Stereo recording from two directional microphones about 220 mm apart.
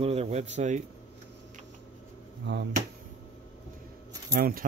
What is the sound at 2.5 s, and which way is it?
Speech, 55° right (ahead or behind).